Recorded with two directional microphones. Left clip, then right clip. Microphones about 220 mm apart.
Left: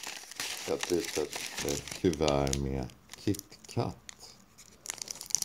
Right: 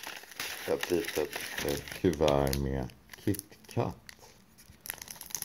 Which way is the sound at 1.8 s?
5° left (ahead or behind).